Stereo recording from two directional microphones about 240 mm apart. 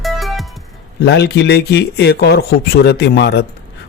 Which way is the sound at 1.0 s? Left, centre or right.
Left.